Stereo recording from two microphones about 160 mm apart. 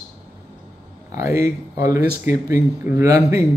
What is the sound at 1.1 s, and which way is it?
A man's voice, 20° right (ahead or behind).